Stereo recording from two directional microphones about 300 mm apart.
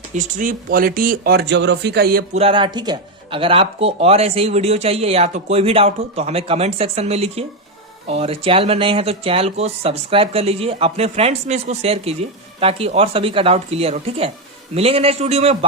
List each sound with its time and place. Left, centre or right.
0.1 s speech: right